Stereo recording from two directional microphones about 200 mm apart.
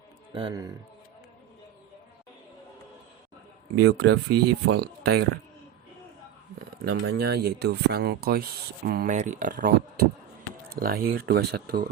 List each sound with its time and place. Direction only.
0.3 s a man's voice: 20° right (ahead or behind)
3.8 s speech: 55° right (ahead or behind)
7.1 s speech: 55° right (ahead or behind)